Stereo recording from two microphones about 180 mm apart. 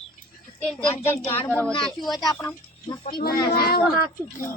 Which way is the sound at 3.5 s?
60° left (ahead or behind).